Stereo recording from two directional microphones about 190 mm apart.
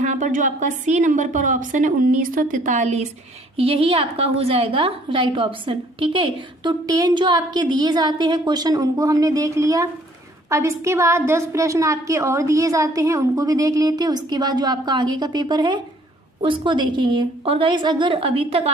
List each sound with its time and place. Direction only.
0.0 s a woman's voice: 40° right (ahead or behind)